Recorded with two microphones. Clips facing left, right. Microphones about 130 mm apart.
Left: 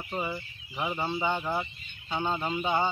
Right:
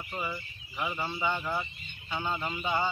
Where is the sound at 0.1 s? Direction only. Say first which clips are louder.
Left 4 dB; 25° left (ahead or behind).